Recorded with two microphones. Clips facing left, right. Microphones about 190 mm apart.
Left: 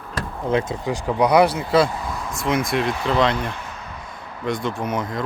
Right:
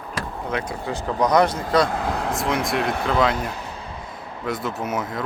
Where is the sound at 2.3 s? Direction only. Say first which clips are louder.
Left 5 dB; centre (ahead or behind).